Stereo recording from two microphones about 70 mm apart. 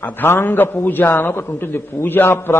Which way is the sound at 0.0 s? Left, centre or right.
Left.